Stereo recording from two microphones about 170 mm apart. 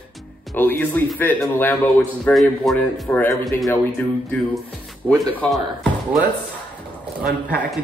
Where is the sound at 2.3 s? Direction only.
Centre (ahead or behind).